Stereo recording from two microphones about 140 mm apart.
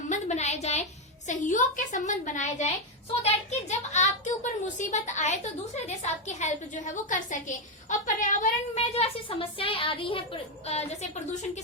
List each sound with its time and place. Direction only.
0.1 s a sound: 55° left (ahead or behind)
1.3 s a woman's voice: 65° left (ahead or behind); by 10.2 s 40° left (ahead or behind)
10.7 s a woman's voice: 50° left (ahead or behind)